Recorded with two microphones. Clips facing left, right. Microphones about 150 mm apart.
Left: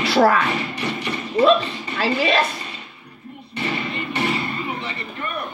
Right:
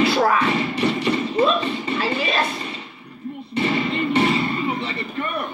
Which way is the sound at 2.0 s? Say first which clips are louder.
Left 7 dB; 80° left.